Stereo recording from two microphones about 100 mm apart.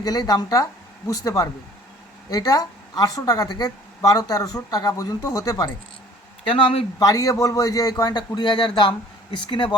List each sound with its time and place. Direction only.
0.0 s a woman's voice: 45° left (ahead or behind)
6.5 s speech: 65° left (ahead or behind)
7.0 s a woman's voice: 35° left (ahead or behind); by 9.7 s 55° left (ahead or behind)